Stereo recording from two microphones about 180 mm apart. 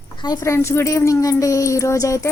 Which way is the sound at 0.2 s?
20° left (ahead or behind).